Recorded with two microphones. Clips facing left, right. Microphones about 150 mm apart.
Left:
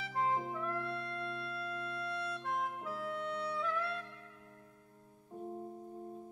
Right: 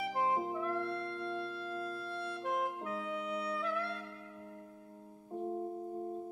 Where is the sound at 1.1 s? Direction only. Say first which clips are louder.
Right 2 dB; 10° right (ahead or behind).